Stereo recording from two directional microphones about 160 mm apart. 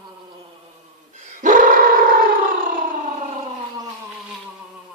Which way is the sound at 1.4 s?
55° right (ahead or behind).